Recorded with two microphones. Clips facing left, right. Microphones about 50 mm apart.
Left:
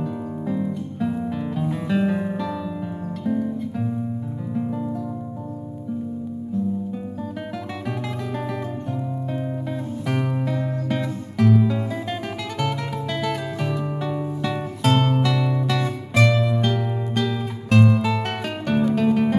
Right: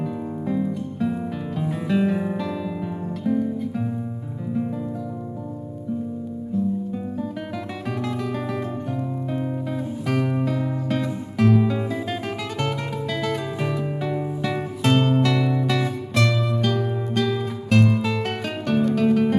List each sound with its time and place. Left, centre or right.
0.0 s music: centre
9.3 s music: centre
16.2 s music: centre